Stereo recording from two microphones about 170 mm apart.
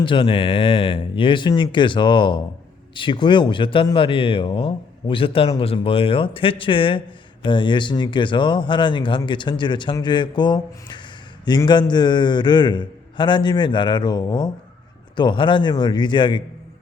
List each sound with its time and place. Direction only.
0.0 s speech: 30° left (ahead or behind)